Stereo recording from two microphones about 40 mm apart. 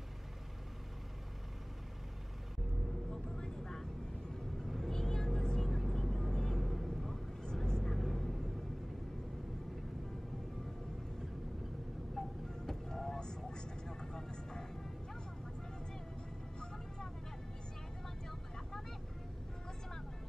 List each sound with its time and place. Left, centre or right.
3.3 s vehicle: centre
6.6 s vehicle: centre
12.2 s music: centre
13.2 s vehicle: centre
16.5 s vehicle: centre